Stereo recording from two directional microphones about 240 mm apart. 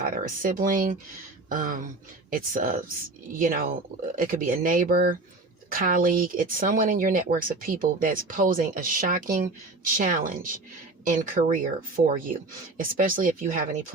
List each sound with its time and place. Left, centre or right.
0.0 s speech: right